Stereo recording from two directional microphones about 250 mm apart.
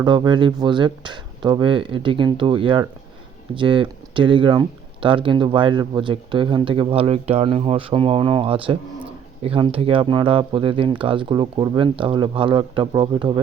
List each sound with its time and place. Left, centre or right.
0.0 s speech: centre